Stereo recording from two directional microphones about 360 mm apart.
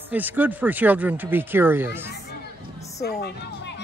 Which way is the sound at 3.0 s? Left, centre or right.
Left.